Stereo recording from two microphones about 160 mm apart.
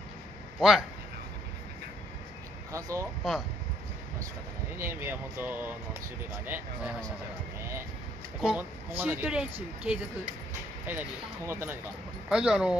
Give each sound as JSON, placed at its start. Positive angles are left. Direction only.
{"t": 0.6, "sound": "a man's voice", "side_deg": 0}
{"t": 2.7, "sound": "speech", "side_deg": -20}
{"t": 4.8, "sound": "speech", "side_deg": -15}
{"t": 8.4, "sound": "speech", "side_deg": -10}